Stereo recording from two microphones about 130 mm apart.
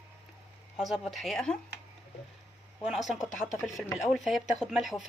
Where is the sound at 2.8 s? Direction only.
Centre (ahead or behind).